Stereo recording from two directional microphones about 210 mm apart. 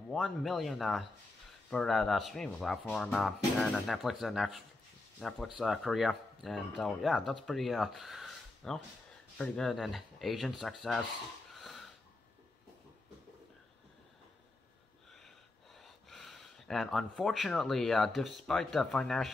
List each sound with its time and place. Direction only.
0.1 s speech: centre (ahead or behind)
11.5 s wheeze: centre (ahead or behind)
15.1 s speech: centre (ahead or behind)